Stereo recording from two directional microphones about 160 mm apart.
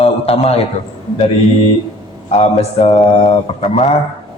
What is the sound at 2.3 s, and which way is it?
Speech, 40° left (ahead or behind).